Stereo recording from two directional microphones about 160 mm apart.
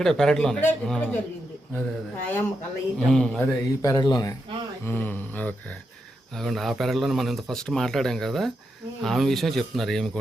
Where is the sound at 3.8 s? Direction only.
25° left (ahead or behind).